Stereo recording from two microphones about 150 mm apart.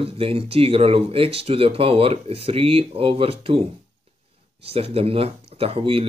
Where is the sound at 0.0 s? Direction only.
40° right (ahead or behind).